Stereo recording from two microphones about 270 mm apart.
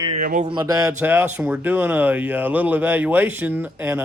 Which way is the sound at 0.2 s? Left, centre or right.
Right.